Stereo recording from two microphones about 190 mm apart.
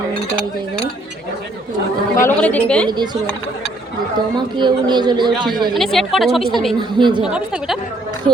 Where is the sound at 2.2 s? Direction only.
10° left (ahead or behind).